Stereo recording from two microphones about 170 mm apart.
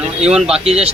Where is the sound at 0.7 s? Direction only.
35° right (ahead or behind).